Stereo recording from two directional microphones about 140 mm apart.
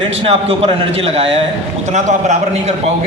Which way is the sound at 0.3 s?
45° right (ahead or behind).